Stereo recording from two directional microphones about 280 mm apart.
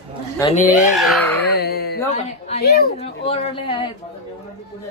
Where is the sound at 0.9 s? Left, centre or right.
Centre.